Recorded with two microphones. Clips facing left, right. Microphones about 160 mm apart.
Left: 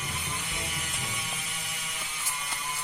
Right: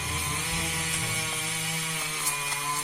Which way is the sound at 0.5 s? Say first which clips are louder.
Right 3 dB; 85° right.